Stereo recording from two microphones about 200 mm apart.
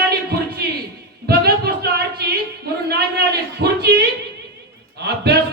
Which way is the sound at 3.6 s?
55° right (ahead or behind).